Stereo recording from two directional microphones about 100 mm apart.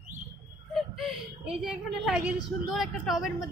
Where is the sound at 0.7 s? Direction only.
Centre (ahead or behind).